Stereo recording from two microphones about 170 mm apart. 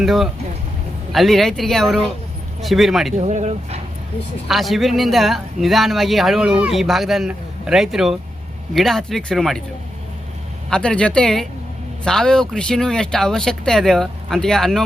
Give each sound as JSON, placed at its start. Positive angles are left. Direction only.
{"t": 0.0, "sound": "speech", "side_deg": 0}
{"t": 3.2, "sound": "speech", "side_deg": -40}
{"t": 4.4, "sound": "speech", "side_deg": 0}
{"t": 10.7, "sound": "speech", "side_deg": 5}